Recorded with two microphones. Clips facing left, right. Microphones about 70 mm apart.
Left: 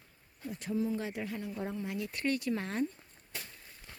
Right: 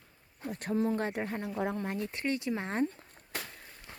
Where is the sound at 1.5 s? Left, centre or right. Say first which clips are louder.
Right 5 dB; right.